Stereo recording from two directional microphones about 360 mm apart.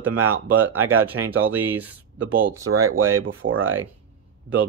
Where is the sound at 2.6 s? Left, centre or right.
Right.